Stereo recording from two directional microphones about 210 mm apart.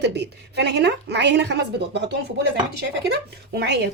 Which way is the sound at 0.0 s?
55° right (ahead or behind).